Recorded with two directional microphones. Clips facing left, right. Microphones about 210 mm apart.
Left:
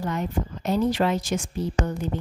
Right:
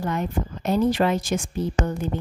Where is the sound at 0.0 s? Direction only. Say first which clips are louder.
Right 1 dB; 55° right (ahead or behind).